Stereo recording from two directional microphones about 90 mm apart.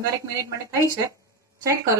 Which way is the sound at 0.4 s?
35° right (ahead or behind).